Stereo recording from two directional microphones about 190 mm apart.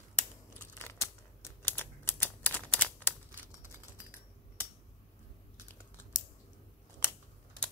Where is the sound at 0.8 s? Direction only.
15° left (ahead or behind).